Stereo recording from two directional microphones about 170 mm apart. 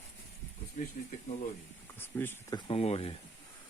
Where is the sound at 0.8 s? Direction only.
50° left (ahead or behind).